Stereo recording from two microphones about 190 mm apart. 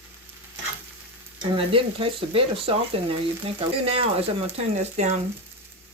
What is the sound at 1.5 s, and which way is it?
Speech, 30° right (ahead or behind).